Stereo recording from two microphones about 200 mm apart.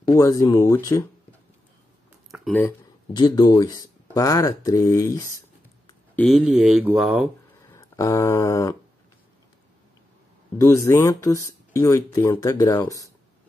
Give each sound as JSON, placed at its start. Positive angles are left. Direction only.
{"t": 0.1, "sound": "speech", "side_deg": 15}
{"t": 3.1, "sound": "speech", "side_deg": 20}
{"t": 6.1, "sound": "speech", "side_deg": 0}
{"t": 7.7, "sound": "a sound", "side_deg": 15}
{"t": 10.6, "sound": "speech", "side_deg": 15}